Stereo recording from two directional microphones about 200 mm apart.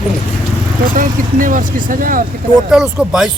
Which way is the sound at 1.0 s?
40° right (ahead or behind).